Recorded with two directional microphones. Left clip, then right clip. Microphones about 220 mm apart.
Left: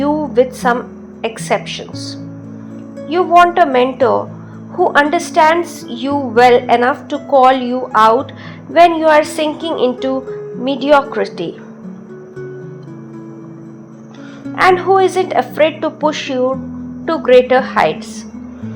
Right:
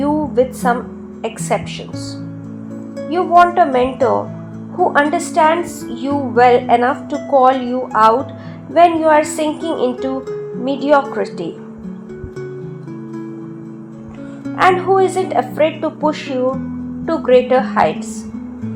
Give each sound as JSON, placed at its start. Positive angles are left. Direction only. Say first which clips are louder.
{"t": 0.0, "sound": "music", "louder": "left 2 dB", "side_deg": 20}
{"t": 1.2, "sound": "a woman's voice", "louder": "left 2 dB", "side_deg": 25}
{"t": 14.5, "sound": "a woman's voice", "louder": "left 2 dB", "side_deg": 25}